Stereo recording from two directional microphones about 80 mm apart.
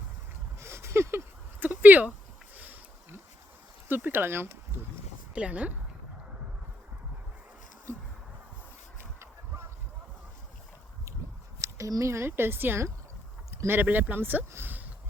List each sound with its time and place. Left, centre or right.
0.6 s a sound: right
2.6 s sniff: right
3.8 s speech: right
5.3 s speech: centre
11.6 s speech: right